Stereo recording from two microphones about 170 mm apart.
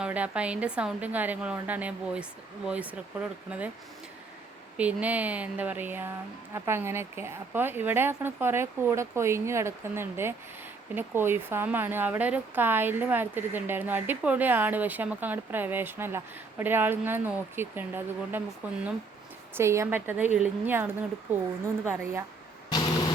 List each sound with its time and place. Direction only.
0.0 s speech: 10° right (ahead or behind)
4.8 s speech: 10° right (ahead or behind)
22.7 s a sound: 25° left (ahead or behind)